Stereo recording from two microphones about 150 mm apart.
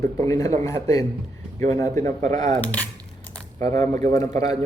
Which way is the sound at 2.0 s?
55° right (ahead or behind).